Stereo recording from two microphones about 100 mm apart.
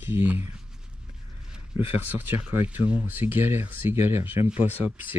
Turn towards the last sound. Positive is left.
turn(degrees=-20)  # may be behind; listen again after turning